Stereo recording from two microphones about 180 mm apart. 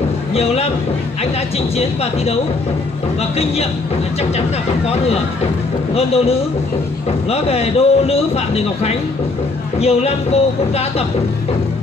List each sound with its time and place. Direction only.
0.3 s a man's voice: 35° left (ahead or behind)
5.9 s speech: 35° left (ahead or behind)